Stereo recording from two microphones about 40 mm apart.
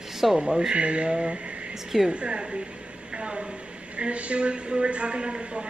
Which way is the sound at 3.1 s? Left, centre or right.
Right.